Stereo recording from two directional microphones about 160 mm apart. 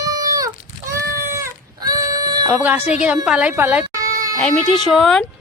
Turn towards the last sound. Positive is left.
turn(degrees=0)  # may be behind; listen again after turning